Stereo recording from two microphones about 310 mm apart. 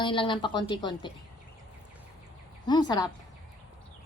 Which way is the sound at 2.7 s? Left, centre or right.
Centre.